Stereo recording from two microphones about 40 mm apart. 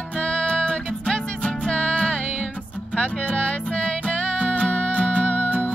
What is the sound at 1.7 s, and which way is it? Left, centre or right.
Music, left.